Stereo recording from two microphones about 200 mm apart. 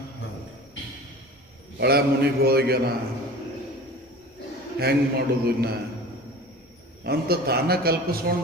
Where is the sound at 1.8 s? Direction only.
50° right (ahead or behind).